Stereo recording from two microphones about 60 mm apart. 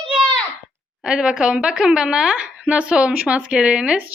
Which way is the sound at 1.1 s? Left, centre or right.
Centre.